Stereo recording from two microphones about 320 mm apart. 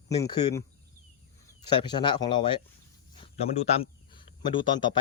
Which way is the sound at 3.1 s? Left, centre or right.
Centre.